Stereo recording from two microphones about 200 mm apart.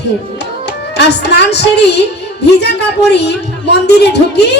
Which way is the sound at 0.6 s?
55° left (ahead or behind).